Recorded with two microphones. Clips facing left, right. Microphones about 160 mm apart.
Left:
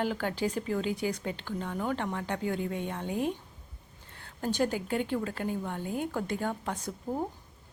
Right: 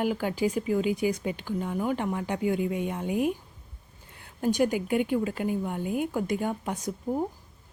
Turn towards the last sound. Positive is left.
turn(degrees=-10)  # may be behind; listen again after turning